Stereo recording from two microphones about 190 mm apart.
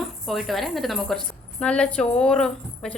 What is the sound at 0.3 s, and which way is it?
A woman's voice, centre (ahead or behind).